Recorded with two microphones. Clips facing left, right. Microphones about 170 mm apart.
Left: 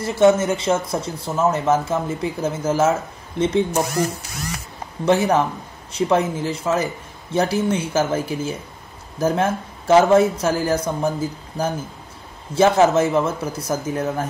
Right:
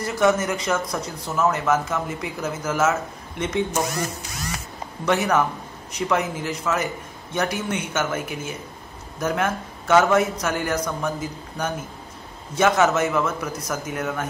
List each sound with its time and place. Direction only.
0.0 s speech: 30° left (ahead or behind)
5.0 s speech: 30° left (ahead or behind)